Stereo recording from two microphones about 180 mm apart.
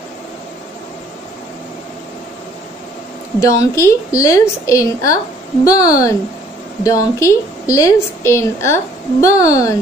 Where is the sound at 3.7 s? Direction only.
15° left (ahead or behind).